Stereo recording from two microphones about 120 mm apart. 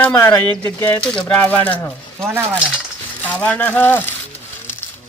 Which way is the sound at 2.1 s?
20° right (ahead or behind).